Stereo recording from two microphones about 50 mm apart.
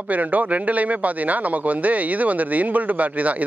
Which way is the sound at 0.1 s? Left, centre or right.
Right.